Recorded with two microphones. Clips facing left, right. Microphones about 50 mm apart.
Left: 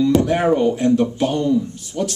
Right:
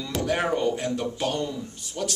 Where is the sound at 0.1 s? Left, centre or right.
Centre.